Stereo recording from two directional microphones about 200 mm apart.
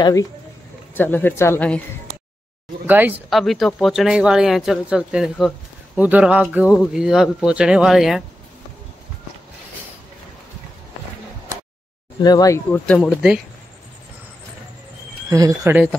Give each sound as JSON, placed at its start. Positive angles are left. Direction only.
{"t": 0.0, "sound": "speech", "side_deg": 15}
{"t": 2.9, "sound": "speech", "side_deg": -10}
{"t": 12.2, "sound": "speech", "side_deg": 20}
{"t": 15.2, "sound": "speech", "side_deg": -15}